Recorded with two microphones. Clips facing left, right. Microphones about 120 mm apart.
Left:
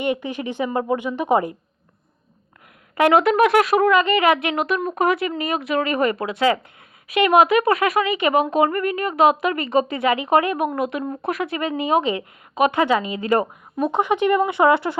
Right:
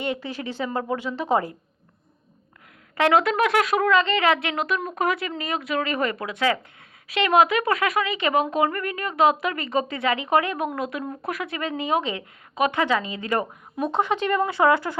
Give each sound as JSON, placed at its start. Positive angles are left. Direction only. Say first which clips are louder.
{"t": 0.0, "sound": "a woman's voice", "louder": "left 5 dB", "side_deg": 15}
{"t": 2.9, "sound": "a woman's voice", "louder": "left 4 dB", "side_deg": 20}
{"t": 3.4, "sound": "speech", "louder": "left 5 dB", "side_deg": 50}
{"t": 3.8, "sound": "a woman's voice", "louder": "left 3 dB", "side_deg": 15}
{"t": 7.6, "sound": "a woman's voice", "louder": "left 4 dB", "side_deg": 30}